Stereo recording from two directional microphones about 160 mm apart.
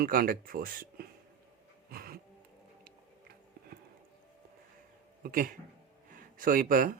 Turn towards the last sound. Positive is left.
turn(degrees=-60)  # may be behind; listen again after turning